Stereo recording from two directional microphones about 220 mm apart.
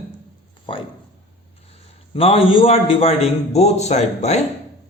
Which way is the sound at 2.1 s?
25° left (ahead or behind).